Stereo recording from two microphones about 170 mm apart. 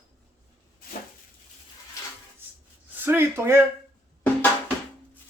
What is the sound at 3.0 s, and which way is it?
Speech, 10° right (ahead or behind).